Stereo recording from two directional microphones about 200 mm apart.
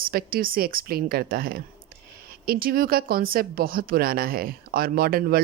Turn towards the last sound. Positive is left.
turn(degrees=-50)  # may be behind; listen again after turning